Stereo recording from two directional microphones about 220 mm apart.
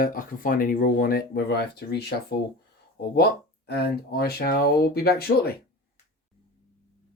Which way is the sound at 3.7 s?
45° left (ahead or behind).